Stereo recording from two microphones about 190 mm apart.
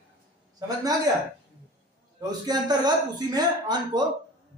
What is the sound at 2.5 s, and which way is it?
Speech, 20° right (ahead or behind).